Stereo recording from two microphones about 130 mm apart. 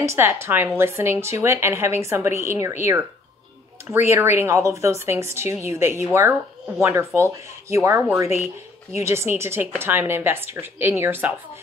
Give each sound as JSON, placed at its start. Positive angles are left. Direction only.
{"t": 0.0, "sound": "a woman's voice", "side_deg": -20}